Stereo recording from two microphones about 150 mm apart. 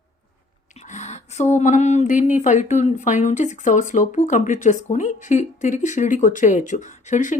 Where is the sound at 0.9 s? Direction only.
50° left (ahead or behind).